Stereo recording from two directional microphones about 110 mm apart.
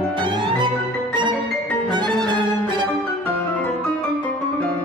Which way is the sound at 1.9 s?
45° right (ahead or behind).